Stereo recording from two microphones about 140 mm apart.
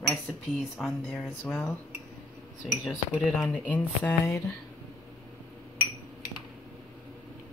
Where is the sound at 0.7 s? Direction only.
Centre (ahead or behind).